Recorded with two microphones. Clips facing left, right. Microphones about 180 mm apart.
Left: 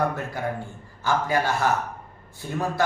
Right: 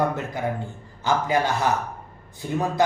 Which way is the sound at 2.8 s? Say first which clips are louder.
Right 3 dB; 20° right (ahead or behind).